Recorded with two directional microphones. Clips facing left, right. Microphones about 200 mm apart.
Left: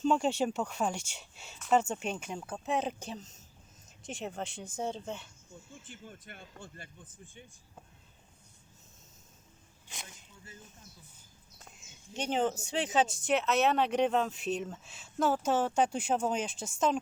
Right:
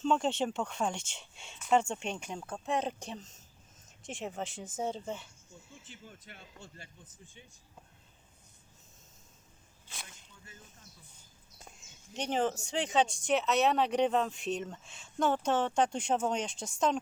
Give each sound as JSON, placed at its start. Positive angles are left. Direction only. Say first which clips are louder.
{"t": 0.0, "sound": "speech", "louder": "left 2 dB", "side_deg": 10}
{"t": 5.7, "sound": "speech", "louder": "left 3 dB", "side_deg": 50}
{"t": 9.8, "sound": "a sound", "louder": "left 1 dB", "side_deg": 15}
{"t": 12.1, "sound": "speech", "louder": "left 1 dB", "side_deg": 0}